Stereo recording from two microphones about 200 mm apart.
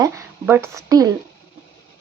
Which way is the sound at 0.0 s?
10° right (ahead or behind).